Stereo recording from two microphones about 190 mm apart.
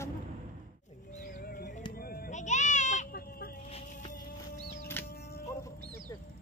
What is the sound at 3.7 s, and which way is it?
Music, 35° left (ahead or behind).